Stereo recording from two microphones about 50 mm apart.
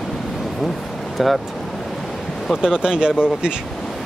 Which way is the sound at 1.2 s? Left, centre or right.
Centre.